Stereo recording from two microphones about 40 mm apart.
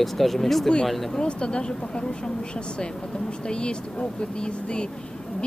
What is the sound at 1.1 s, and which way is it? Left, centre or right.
Speech, left.